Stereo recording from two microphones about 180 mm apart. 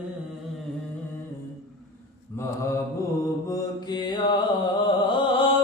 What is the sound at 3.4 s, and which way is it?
Mantra, 20° left (ahead or behind).